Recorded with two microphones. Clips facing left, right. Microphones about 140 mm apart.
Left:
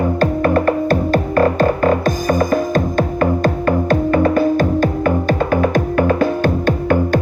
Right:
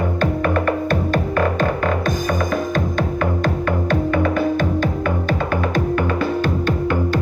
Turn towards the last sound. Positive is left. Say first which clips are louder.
# left 4 dB
turn(degrees=50)  # may be behind; listen again after turning